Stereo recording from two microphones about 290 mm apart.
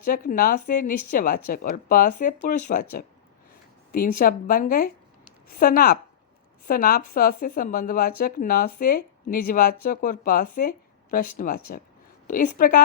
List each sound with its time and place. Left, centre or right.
0.0 s speech: left
3.9 s a woman's voice: left